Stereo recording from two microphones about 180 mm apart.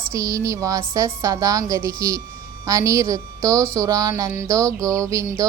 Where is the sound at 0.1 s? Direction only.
20° right (ahead or behind).